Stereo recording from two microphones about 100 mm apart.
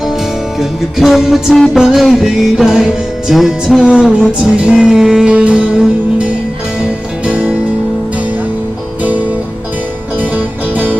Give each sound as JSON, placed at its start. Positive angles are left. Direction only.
{"t": 0.6, "sound": "music", "side_deg": -5}
{"t": 10.2, "sound": "music", "side_deg": -15}